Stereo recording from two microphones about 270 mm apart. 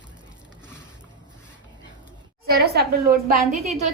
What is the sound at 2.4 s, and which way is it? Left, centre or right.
A woman's voice, right.